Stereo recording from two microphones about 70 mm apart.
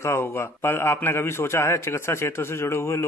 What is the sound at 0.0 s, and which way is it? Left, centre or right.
A man's voice, left.